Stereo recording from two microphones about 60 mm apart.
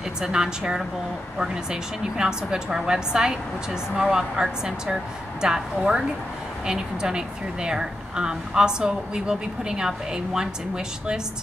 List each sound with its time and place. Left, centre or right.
0.2 s speech: centre